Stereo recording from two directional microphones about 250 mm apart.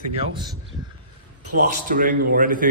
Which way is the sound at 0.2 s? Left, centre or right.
Centre.